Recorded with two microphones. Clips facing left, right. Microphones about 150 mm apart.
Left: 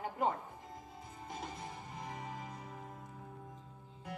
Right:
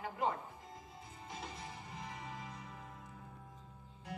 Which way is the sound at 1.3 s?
45° left (ahead or behind).